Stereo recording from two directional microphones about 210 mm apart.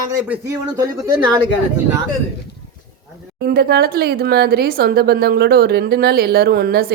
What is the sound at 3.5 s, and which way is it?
Speech, 45° right (ahead or behind).